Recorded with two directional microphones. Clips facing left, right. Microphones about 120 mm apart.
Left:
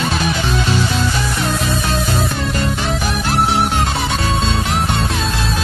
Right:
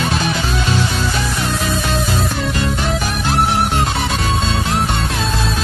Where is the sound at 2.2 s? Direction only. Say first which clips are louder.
Even; centre (ahead or behind).